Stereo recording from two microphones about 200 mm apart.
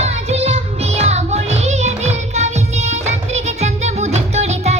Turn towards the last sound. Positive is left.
turn(degrees=-35)  # may be behind; listen again after turning